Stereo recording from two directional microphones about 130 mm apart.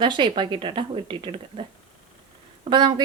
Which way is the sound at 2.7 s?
35° right (ahead or behind).